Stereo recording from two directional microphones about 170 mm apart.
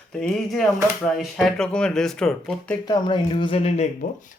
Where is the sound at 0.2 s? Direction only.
5° left (ahead or behind).